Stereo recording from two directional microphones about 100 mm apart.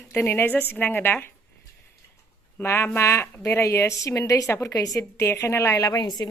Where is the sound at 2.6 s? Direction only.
20° left (ahead or behind).